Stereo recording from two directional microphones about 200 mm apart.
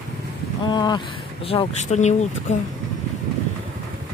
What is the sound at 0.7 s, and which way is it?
Speech, 20° left (ahead or behind).